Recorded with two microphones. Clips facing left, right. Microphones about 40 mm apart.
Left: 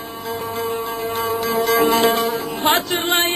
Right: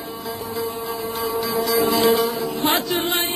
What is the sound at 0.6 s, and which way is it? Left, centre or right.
Music, left.